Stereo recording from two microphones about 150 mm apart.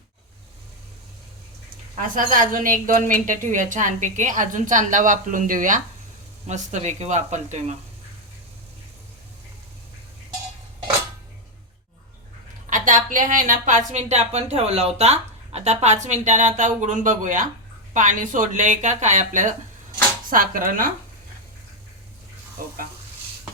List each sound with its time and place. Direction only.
2.0 s a woman's voice: 65° right (ahead or behind)
12.7 s a woman's voice: 60° right (ahead or behind)